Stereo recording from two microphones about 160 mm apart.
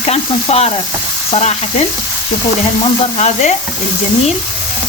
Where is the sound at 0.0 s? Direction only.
40° left (ahead or behind).